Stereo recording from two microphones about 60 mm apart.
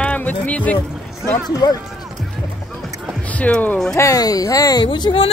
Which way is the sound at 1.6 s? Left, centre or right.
Left.